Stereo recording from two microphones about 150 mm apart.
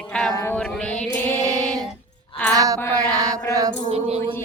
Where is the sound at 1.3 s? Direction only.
25° right (ahead or behind).